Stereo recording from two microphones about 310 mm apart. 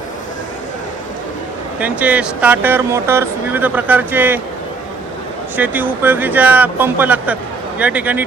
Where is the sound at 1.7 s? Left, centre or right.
Centre.